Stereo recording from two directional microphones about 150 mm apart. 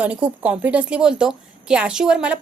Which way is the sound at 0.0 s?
10° right (ahead or behind).